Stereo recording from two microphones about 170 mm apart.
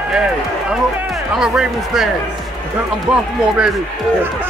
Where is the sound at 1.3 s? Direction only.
5° right (ahead or behind).